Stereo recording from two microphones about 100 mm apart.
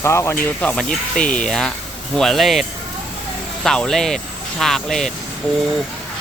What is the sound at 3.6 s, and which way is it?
Speech, 5° left (ahead or behind).